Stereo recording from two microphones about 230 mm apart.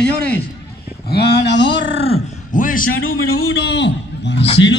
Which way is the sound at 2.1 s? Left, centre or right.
Left.